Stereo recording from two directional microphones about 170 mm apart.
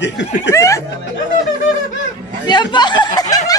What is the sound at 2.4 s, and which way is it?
Speech, 25° left (ahead or behind).